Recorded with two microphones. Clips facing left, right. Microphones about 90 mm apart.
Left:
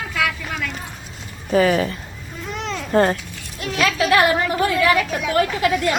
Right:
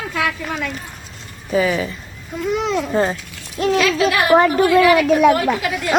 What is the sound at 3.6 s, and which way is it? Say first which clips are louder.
Speech: right 5 dB; 35° right (ahead or behind).